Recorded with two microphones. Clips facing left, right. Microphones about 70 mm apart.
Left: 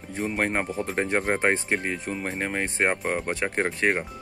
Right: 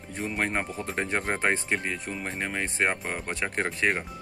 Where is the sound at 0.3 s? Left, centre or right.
Left.